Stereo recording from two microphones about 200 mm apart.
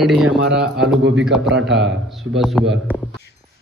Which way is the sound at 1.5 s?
60° right (ahead or behind).